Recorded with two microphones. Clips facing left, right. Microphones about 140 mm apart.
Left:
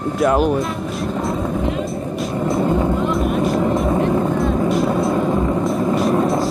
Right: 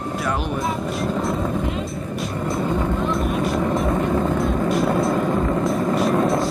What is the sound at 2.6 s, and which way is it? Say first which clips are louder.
Vehicle: left 4 dB; 20° left (ahead or behind).